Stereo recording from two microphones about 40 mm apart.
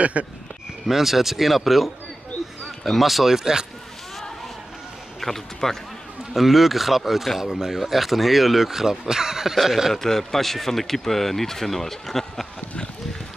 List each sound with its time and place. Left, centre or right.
0.0 s speech: right
0.8 s speech: centre
3.3 s speech: centre
5.2 s speech: centre
6.3 s speech: centre
9.9 s speech: centre